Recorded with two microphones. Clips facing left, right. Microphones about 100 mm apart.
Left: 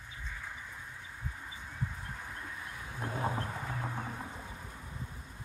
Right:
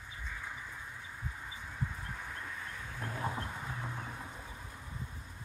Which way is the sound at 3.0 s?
25° left (ahead or behind).